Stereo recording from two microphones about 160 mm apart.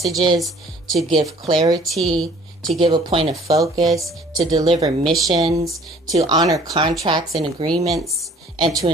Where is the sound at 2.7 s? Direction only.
30° right (ahead or behind).